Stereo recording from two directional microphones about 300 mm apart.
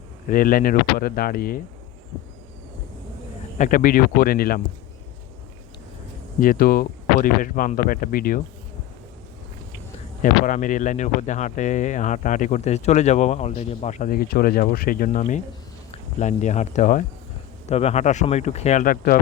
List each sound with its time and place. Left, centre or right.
0.3 s speech: left
3.6 s speech: left
6.4 s speech: left
10.2 s speech: left